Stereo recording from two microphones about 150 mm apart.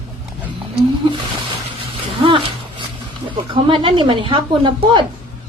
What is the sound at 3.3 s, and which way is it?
Speech, 35° right (ahead or behind).